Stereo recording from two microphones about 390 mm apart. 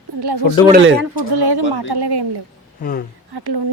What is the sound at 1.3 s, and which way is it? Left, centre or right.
A woman's voice, right.